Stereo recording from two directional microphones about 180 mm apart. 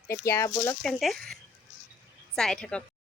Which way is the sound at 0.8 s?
Centre (ahead or behind).